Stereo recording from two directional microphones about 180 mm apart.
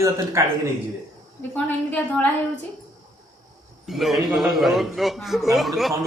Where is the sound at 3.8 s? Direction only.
Centre (ahead or behind).